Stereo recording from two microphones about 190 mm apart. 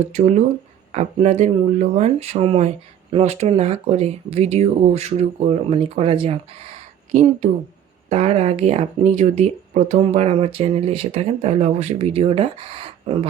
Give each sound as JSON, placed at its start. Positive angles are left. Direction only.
{"t": 0.1, "sound": "speech", "side_deg": -35}